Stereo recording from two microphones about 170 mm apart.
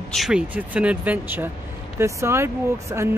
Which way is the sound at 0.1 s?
5° right (ahead or behind).